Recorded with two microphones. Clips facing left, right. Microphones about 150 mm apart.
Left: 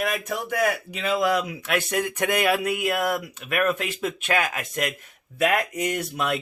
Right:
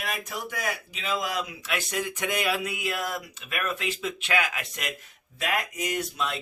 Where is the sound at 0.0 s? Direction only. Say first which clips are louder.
Left 7 dB; 50° left (ahead or behind).